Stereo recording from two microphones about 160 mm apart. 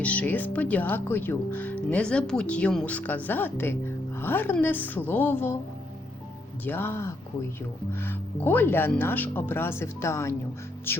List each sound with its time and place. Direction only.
0.0 s speech: 10° left (ahead or behind)
6.7 s speech: 15° left (ahead or behind)